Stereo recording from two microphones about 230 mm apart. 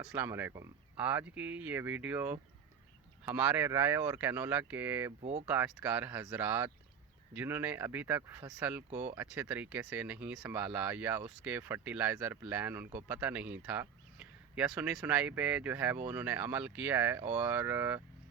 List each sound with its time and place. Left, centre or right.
0.1 s speech: centre
8.9 s speech: right
9.1 s speech: centre